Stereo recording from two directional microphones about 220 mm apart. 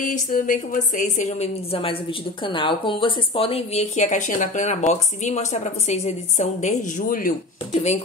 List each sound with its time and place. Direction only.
0.0 s a woman's voice: 40° left (ahead or behind)